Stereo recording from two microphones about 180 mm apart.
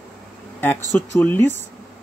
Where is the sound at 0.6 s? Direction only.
10° left (ahead or behind).